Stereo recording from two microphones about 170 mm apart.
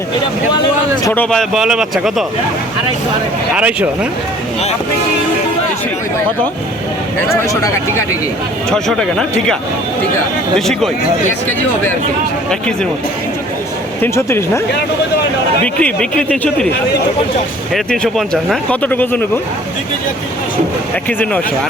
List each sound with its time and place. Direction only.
1.0 s speech: 10° left (ahead or behind)
3.5 s speech: 10° right (ahead or behind)
7.3 s speech: 20° left (ahead or behind)
8.7 s speech: 5° left (ahead or behind)
12.5 s speech: 5° left (ahead or behind)
14.0 s speech: 15° left (ahead or behind)
15.6 s speech: 5° left (ahead or behind)
17.7 s speech: centre (ahead or behind)
21.1 s speech: 10° left (ahead or behind)